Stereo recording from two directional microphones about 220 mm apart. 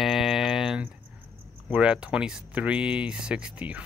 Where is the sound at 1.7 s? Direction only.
5° right (ahead or behind).